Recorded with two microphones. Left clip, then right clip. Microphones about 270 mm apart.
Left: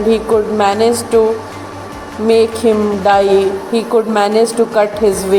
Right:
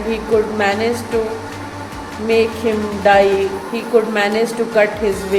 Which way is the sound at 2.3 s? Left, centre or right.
Left.